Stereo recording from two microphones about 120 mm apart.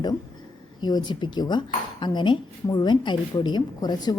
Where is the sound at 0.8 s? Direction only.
35° left (ahead or behind).